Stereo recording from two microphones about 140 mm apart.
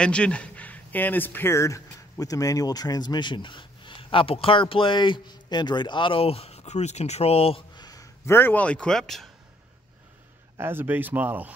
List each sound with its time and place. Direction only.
0.0 s speech: 5° left (ahead or behind)
10.6 s speech: 15° right (ahead or behind)